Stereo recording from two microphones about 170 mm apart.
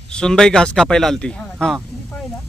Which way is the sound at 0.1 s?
5° left (ahead or behind).